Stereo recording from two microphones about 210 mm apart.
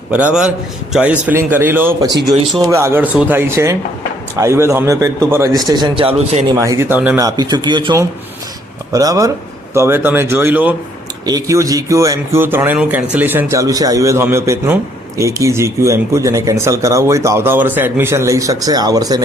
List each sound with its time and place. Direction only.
0.9 s speech: 5° right (ahead or behind); by 6.6 s 25° right (ahead or behind)
6.6 s speech: 15° right (ahead or behind)